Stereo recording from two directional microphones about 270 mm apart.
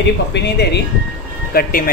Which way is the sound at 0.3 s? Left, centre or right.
Left.